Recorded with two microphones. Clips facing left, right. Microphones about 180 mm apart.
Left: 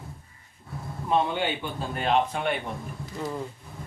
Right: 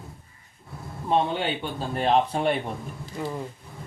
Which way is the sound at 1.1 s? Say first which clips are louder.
Right 1 dB; 30° right (ahead or behind).